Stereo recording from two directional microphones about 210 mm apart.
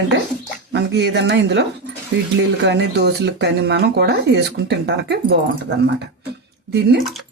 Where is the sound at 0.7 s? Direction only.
55° right (ahead or behind).